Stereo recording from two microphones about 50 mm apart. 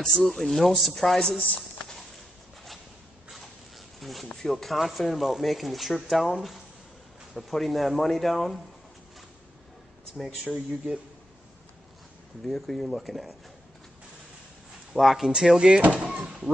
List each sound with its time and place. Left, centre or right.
0.0 s speech: centre
1.9 s walk: centre
4.0 s a sound: centre
4.4 s speech: centre
10.1 s speech: centre
12.4 s speech: centre
14.9 s speech: centre
16.2 s speech: right